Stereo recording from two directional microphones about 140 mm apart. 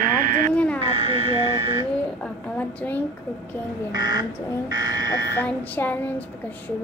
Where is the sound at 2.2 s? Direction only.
10° left (ahead or behind).